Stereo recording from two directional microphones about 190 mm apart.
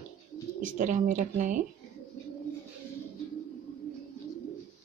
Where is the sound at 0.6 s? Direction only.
40° right (ahead or behind).